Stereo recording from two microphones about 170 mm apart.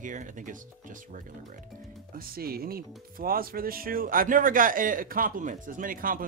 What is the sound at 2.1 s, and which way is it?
Speech, 60° right (ahead or behind).